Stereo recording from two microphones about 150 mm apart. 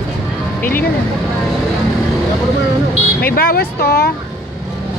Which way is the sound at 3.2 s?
80° left.